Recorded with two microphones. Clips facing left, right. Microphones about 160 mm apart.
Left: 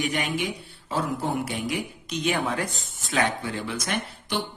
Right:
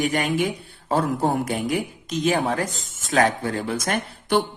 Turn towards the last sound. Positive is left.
turn(degrees=-45)  # may be behind; listen again after turning